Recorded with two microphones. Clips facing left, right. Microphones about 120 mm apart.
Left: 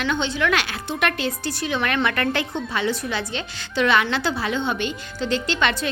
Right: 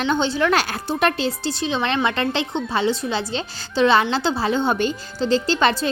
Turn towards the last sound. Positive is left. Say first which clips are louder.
# right 4 dB
turn(degrees=-35)  # may be behind; listen again after turning